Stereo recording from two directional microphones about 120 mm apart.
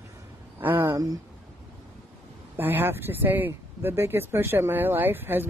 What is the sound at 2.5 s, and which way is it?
Speech, 15° right (ahead or behind).